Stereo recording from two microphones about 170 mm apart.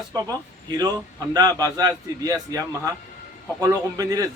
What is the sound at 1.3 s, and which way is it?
A man's voice, 25° right (ahead or behind).